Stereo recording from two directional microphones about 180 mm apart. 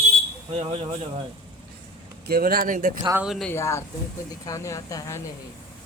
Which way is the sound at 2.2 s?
55° right (ahead or behind).